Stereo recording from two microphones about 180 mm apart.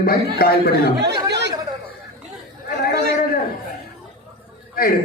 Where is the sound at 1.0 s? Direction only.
70° right (ahead or behind).